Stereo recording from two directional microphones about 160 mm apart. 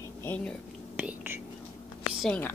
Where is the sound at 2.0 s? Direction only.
10° left (ahead or behind).